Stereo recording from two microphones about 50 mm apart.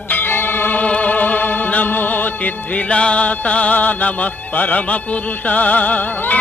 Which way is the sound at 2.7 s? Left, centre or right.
Left.